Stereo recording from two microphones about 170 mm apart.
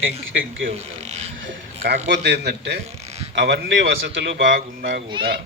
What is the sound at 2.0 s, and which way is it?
A man's voice, 80° right.